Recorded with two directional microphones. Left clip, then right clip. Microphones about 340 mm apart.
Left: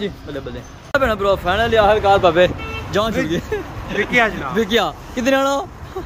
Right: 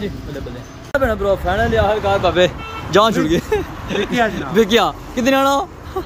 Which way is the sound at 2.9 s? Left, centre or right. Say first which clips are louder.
Right 6 dB; centre.